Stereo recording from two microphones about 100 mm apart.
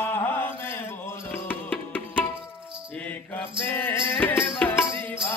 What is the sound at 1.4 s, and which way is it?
Music, 15° left (ahead or behind).